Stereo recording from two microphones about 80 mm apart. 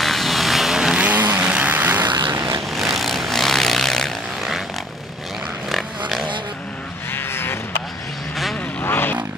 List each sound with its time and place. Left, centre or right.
0.0 s vehicle: centre
1.0 s vehicle: right
2.0 s vehicle: right
2.3 s vehicle: right
2.7 s vehicle: centre
5.7 s pig: centre
7.1 s vehicle: left
8.8 s vehicle: left